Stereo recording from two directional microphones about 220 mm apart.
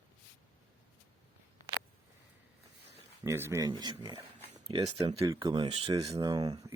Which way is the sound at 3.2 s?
10° right (ahead or behind).